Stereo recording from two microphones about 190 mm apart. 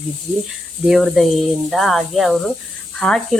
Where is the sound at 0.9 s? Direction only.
Centre (ahead or behind).